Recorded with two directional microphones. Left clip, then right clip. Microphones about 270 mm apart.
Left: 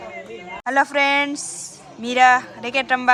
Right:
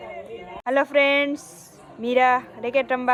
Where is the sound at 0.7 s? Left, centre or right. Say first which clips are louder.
Left 1 dB; centre.